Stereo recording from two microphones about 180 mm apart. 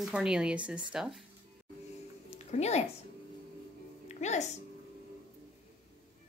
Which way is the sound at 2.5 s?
35° left (ahead or behind).